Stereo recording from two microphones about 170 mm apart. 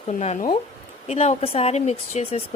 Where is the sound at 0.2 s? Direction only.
40° left (ahead or behind).